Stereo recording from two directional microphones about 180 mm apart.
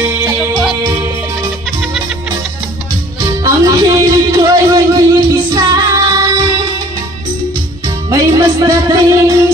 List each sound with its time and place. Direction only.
0.0 s music: 15° right (ahead or behind)
3.4 s music: 20° right (ahead or behind)
5.5 s child singing: 20° right (ahead or behind)
8.1 s music: 20° right (ahead or behind)